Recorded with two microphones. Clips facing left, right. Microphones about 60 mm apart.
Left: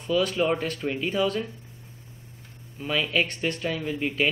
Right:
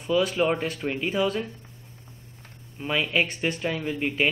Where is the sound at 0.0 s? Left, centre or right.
Centre.